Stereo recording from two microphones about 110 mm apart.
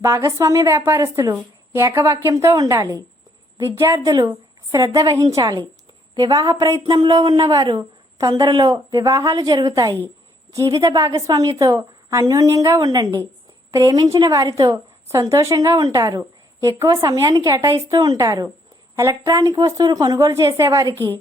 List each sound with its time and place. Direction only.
0.0 s a woman's voice: 25° right (ahead or behind)